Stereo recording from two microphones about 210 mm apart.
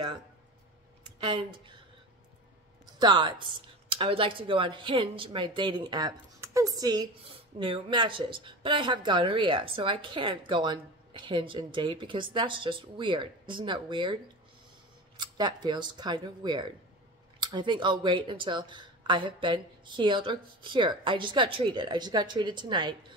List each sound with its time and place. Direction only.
3.0 s a woman's voice: 20° right (ahead or behind)
15.1 s a woman's voice: 20° right (ahead or behind)